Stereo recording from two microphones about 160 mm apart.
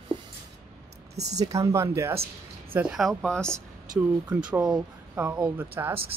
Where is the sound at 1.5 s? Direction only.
20° right (ahead or behind).